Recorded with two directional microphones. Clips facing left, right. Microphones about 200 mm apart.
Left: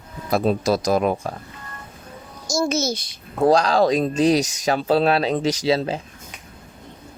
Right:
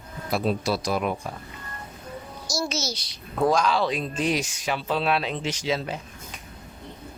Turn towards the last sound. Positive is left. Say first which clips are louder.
# left 7 dB
turn(degrees=35)  # may be behind; listen again after turning